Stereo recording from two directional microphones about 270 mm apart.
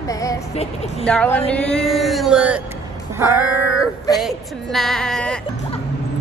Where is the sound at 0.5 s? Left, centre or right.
Left.